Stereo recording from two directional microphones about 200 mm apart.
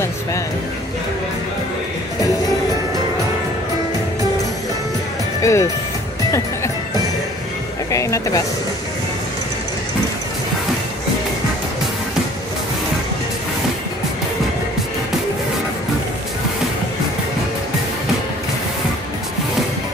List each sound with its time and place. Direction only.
5.4 s speech: 15° left (ahead or behind)
7.9 s music: 15° left (ahead or behind)